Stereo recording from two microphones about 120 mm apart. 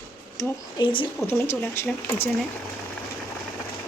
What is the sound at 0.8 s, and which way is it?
Speech, 45° left (ahead or behind).